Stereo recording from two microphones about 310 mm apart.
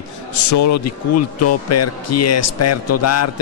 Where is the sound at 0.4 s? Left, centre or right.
Left.